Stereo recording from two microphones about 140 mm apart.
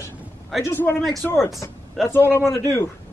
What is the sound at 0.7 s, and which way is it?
A man's voice, 20° left (ahead or behind).